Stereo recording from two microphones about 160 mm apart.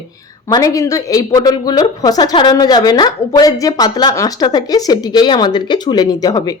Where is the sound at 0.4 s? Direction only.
20° left (ahead or behind).